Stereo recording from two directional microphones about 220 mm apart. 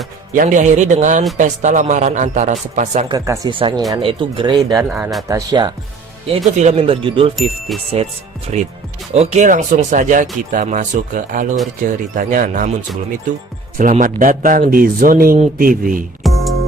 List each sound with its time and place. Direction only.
0.3 s speech: 35° right (ahead or behind)
3.1 s speech: 15° right (ahead or behind)
4.8 s speech: 5° right (ahead or behind)
5.3 s speech: 15° right (ahead or behind)
6.2 s speech: 30° right (ahead or behind)
7.7 s speech: centre (ahead or behind)
8.5 s speech: 30° right (ahead or behind)
13.7 s speech: 35° right (ahead or behind)
16.2 s music: centre (ahead or behind)